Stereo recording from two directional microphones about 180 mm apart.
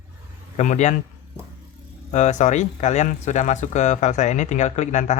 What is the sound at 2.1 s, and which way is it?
Speech, 40° left (ahead or behind).